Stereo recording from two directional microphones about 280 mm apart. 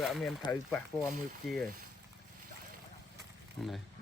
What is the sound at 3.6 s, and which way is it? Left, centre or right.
Speech, centre.